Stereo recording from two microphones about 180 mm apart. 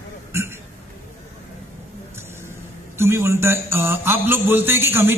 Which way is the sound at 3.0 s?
15° right (ahead or behind).